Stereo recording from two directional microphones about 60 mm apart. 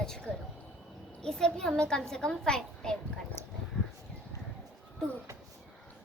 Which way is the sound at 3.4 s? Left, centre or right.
Left.